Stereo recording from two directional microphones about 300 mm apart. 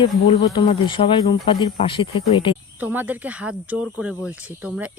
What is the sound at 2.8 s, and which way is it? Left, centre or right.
Speech, centre.